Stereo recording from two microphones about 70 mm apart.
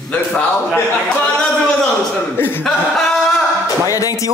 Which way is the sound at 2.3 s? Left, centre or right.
Left.